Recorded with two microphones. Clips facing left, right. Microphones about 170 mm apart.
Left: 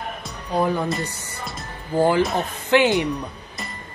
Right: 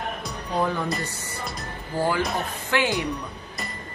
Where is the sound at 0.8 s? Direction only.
Centre (ahead or behind).